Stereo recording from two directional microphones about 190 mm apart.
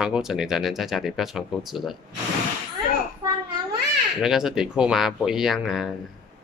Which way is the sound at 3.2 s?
20° right (ahead or behind).